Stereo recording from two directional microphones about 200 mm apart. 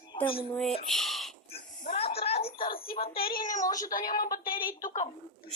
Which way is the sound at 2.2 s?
30° left (ahead or behind).